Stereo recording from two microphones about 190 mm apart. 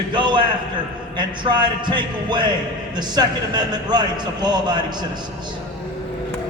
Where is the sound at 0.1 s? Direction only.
25° right (ahead or behind).